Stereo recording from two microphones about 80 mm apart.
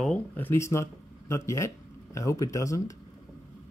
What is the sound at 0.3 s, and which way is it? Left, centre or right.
Speech, left.